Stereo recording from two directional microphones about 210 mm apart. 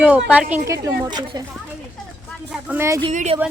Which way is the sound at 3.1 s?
35° right (ahead or behind).